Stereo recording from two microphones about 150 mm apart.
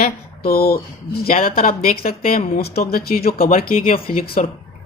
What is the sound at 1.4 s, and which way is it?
Speech, 75° left (ahead or behind).